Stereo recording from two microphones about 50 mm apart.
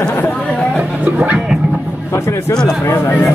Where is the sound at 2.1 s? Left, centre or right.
Left.